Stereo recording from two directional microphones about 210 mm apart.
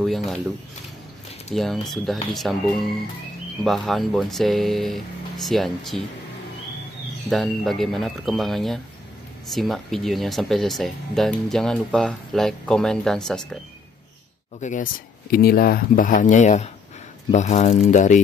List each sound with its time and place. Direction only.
0.0 s speech: centre (ahead or behind)
1.5 s speech: centre (ahead or behind)
3.6 s speech: centre (ahead or behind)
7.2 s speech: centre (ahead or behind)
14.6 s speech: 35° left (ahead or behind)